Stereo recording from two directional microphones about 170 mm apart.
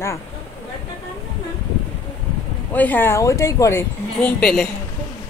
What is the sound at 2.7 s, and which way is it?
Speech, 10° left (ahead or behind).